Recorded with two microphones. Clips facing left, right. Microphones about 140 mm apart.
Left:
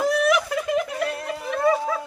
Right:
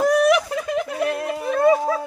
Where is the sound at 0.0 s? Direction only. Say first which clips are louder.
Right 4 dB; 50° right (ahead or behind).